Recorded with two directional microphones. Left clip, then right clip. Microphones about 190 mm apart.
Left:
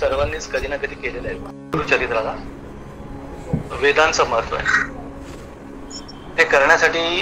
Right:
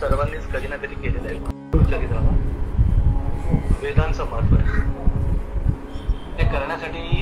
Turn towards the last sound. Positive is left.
turn(degrees=40)  # may be behind; listen again after turning